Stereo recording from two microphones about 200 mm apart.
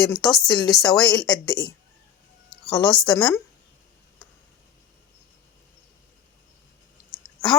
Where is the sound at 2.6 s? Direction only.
5° left (ahead or behind).